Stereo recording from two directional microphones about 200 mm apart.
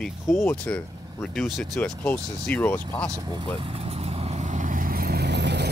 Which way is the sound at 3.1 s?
20° right (ahead or behind).